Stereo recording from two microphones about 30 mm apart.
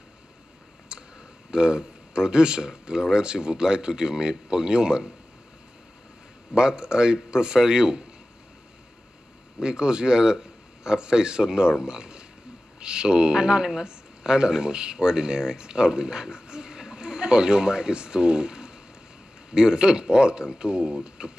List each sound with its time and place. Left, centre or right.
0.9 s clicking: right
1.5 s speech: right
6.5 s speech: right
9.6 s speech: right